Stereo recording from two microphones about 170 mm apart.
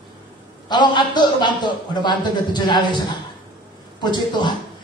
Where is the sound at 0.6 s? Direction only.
25° left (ahead or behind).